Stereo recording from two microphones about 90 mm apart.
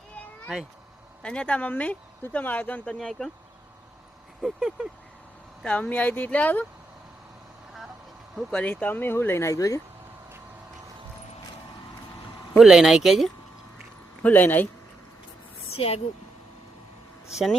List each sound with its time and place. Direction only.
1.2 s speech: 10° left (ahead or behind)
4.4 s speech: 5° right (ahead or behind)
5.6 s speech: 15° left (ahead or behind)
8.5 s speech: 20° left (ahead or behind); by 9.8 s 35° left (ahead or behind)
12.5 s speech: 5° right (ahead or behind)
14.2 s speech: 20° left (ahead or behind)
15.8 s speech: 90° left
17.2 s speech: centre (ahead or behind)